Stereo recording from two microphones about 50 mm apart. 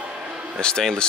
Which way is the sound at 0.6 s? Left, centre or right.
Centre.